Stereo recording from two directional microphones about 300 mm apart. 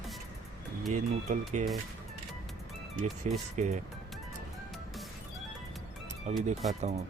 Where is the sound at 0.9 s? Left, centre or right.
Right.